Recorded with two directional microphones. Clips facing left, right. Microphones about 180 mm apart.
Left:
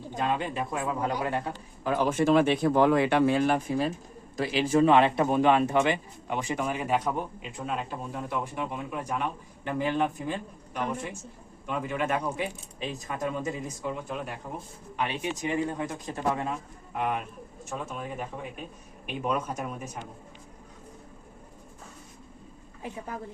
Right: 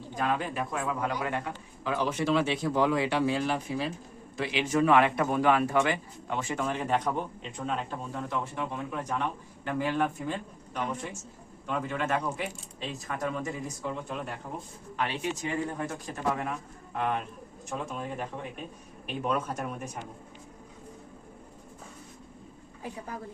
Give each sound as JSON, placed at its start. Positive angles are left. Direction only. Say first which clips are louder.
{"t": 0.1, "sound": "speech", "louder": "left 1 dB", "side_deg": 20}
{"t": 1.8, "sound": "speech", "louder": "left 4 dB", "side_deg": 50}
{"t": 11.6, "sound": "speech", "louder": "left 1 dB", "side_deg": 10}
{"t": 13.8, "sound": "speech", "louder": "left 2 dB", "side_deg": 5}
{"t": 14.9, "sound": "speech", "louder": "left 1 dB", "side_deg": 15}
{"t": 16.9, "sound": "speech", "louder": "even", "side_deg": 10}